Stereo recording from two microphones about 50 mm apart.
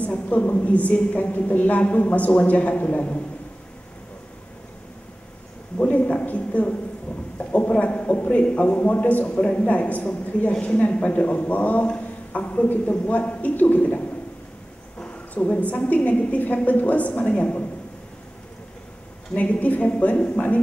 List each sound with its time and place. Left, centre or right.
0.0 s a woman's voice: left
5.8 s a sound: left
8.5 s a woman's voice: left
19.3 s a woman's voice: left